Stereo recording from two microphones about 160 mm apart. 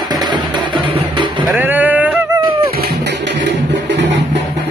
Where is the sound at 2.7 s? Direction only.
75° right (ahead or behind); by 3.4 s 90° right.